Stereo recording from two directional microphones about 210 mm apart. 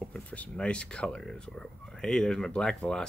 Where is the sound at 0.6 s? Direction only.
5° left (ahead or behind).